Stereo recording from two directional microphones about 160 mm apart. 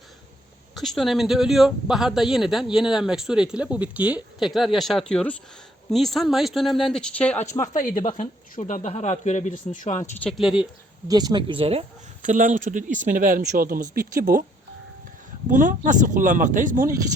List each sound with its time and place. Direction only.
0.7 s a man's voice: centre (ahead or behind); by 7.7 s 20° left (ahead or behind)
7.7 s speech: 55° left (ahead or behind)
10.2 s a man's voice: centre (ahead or behind)
11.1 s speech: 25° right (ahead or behind)
12.2 s speech: 50° right (ahead or behind)
15.4 s speech: 55° right (ahead or behind)